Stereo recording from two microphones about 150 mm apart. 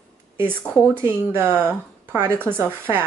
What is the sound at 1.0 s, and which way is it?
Speech, 15° right (ahead or behind).